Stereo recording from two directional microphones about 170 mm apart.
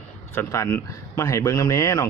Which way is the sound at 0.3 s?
15° left (ahead or behind).